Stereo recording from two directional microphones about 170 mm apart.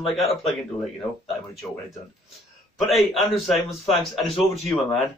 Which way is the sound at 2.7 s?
Centre (ahead or behind).